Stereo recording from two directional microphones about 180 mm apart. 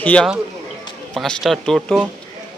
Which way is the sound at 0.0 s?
10° left (ahead or behind).